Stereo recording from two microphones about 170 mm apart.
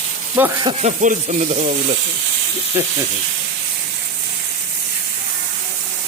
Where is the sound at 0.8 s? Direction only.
45° right (ahead or behind).